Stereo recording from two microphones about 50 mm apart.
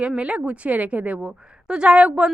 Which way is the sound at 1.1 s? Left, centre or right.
Centre.